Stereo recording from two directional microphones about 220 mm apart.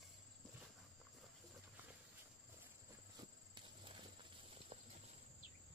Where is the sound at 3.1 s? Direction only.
20° right (ahead or behind).